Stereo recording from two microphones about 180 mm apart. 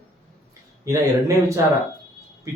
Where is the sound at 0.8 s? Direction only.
15° right (ahead or behind).